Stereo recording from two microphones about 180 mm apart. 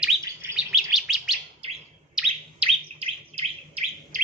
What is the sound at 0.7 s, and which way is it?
Bird, centre (ahead or behind).